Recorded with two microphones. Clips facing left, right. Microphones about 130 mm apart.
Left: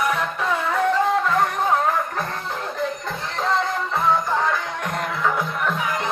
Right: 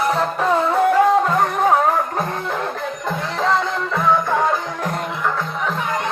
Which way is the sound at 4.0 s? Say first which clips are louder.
Right 3 dB; 50° right (ahead or behind).